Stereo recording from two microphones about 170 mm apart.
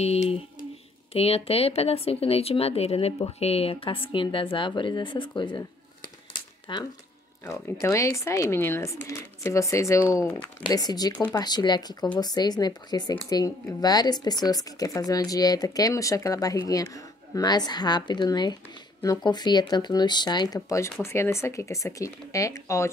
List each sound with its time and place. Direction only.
0.0 s speech: 35° left (ahead or behind)
6.3 s a sound: 25° left (ahead or behind)
7.8 s speech: 15° left (ahead or behind)